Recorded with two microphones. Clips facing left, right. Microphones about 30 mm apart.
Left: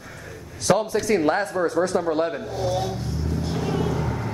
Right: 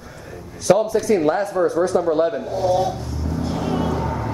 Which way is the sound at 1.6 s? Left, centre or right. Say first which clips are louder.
Right 4 dB; left.